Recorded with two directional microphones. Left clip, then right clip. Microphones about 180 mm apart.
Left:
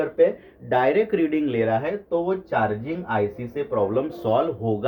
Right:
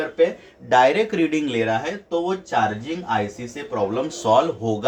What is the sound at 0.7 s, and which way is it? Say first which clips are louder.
Speech: right 3 dB; 20° right (ahead or behind).